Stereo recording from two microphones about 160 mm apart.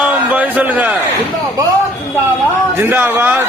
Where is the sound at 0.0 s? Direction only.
10° right (ahead or behind).